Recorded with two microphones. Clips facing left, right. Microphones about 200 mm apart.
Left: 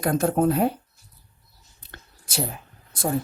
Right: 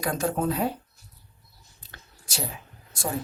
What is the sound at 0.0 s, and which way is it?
Speech, 55° left (ahead or behind).